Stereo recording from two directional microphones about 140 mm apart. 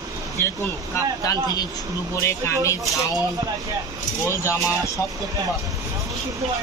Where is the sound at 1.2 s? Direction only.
25° left (ahead or behind).